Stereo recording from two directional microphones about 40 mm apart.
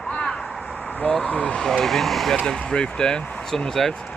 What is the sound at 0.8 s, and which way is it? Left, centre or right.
Vehicle, left.